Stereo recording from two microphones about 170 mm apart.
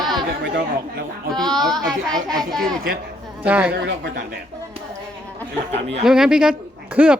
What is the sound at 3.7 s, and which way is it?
Speech, 75° right (ahead or behind).